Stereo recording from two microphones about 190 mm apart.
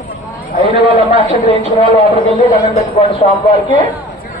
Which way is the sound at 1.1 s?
25° left (ahead or behind).